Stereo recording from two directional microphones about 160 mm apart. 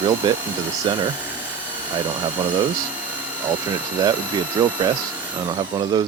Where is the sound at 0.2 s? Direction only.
30° right (ahead or behind).